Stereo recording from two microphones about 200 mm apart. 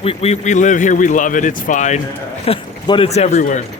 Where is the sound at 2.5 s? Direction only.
25° left (ahead or behind).